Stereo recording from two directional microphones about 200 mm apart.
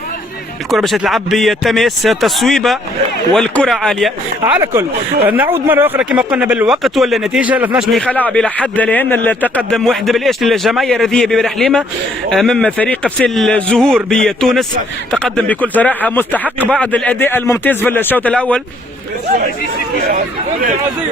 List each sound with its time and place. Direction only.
0.7 s speech: centre (ahead or behind)
4.5 s speech: 15° right (ahead or behind); by 18.6 s 5° left (ahead or behind)
20.1 s speech: 45° right (ahead or behind)